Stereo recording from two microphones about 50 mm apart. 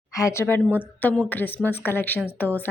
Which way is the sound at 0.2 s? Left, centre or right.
Left.